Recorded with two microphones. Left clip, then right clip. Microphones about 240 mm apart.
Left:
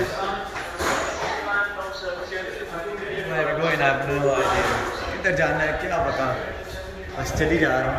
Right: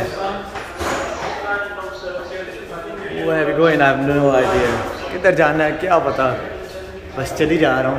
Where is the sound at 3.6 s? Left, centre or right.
Right.